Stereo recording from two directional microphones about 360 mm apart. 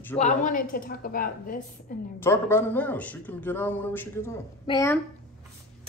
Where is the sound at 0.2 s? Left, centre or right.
Left.